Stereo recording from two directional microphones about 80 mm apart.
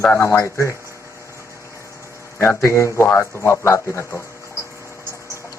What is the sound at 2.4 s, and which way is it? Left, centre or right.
Speech, left.